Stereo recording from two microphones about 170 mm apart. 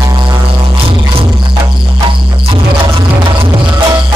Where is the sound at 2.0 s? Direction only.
30° right (ahead or behind).